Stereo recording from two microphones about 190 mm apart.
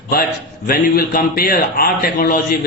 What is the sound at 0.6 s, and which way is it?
Speech, 50° left (ahead or behind).